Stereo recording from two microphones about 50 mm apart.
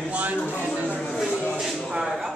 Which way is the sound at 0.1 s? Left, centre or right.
Right.